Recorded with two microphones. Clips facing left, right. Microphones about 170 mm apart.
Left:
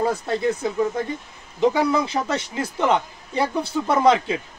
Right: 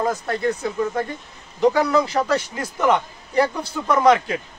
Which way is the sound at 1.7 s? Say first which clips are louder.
Right 4 dB; 25° left (ahead or behind).